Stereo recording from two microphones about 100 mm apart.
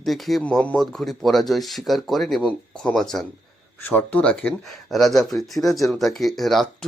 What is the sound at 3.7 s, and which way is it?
Speech, 20° left (ahead or behind).